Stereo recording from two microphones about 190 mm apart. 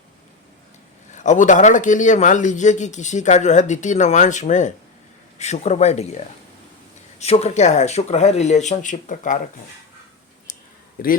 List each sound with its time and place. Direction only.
1.1 s a man's voice: 40° left (ahead or behind)
7.2 s a man's voice: 35° left (ahead or behind)
11.0 s a man's voice: 50° left (ahead or behind)